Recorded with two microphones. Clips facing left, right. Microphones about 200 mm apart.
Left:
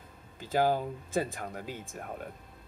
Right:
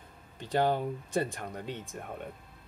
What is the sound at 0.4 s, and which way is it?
A man's voice, 5° left (ahead or behind).